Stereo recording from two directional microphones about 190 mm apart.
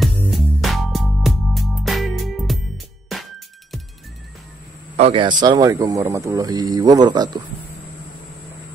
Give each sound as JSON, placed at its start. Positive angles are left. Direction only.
{"t": 0.3, "sound": "music", "side_deg": 0}
{"t": 4.9, "sound": "speech", "side_deg": -30}